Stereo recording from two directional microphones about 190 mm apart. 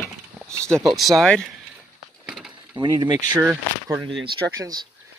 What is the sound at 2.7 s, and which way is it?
Speech, 20° right (ahead or behind).